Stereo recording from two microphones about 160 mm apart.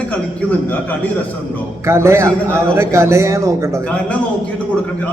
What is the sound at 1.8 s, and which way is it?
A man's voice, 15° right (ahead or behind).